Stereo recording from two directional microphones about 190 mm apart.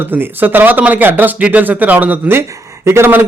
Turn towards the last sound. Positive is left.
turn(degrees=-10)  # may be behind; listen again after turning